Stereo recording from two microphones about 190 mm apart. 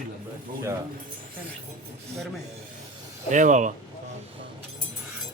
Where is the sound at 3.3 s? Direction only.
40° right (ahead or behind).